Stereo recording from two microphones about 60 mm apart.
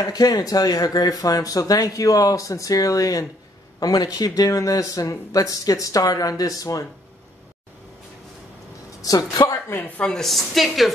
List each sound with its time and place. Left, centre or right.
0.0 s speech: left
3.8 s speech: left
9.0 s speech: left
10.0 s a woman's voice: centre